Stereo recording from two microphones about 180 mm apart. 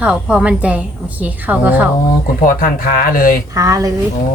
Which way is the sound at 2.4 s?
50° left (ahead or behind).